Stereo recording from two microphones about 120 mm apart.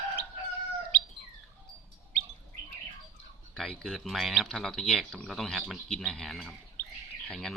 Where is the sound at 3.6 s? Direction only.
Centre (ahead or behind).